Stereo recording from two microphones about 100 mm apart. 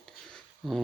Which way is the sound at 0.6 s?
Centre (ahead or behind).